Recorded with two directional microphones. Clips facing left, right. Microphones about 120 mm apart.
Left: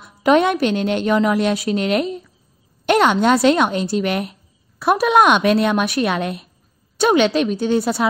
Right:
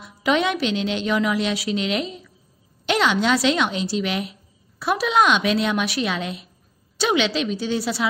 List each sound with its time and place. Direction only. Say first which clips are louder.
0.0 s a woman's voice: left 6 dB; 50° left (ahead or behind)